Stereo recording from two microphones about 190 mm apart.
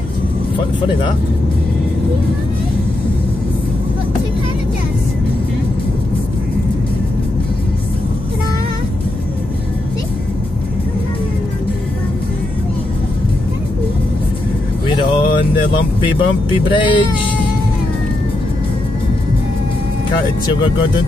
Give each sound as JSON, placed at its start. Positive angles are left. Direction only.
{"t": 14.9, "sound": "speech", "side_deg": 25}